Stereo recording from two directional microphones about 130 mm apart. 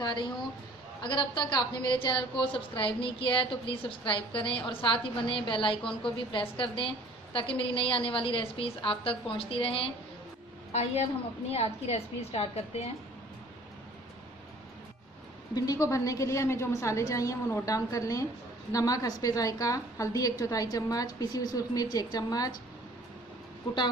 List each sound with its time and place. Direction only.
0.0 s a woman's voice: 35° left (ahead or behind)
10.7 s a woman's voice: 60° left (ahead or behind)
15.5 s a woman's voice: 30° left (ahead or behind)